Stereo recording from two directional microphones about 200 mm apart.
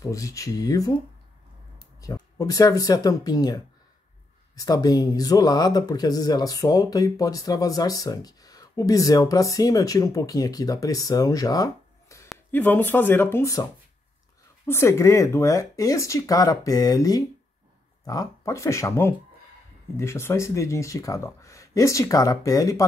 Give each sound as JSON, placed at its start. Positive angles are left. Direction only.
{"t": 0.0, "sound": "speech", "side_deg": 15}
{"t": 2.0, "sound": "speech", "side_deg": 15}
{"t": 14.7, "sound": "speech", "side_deg": 15}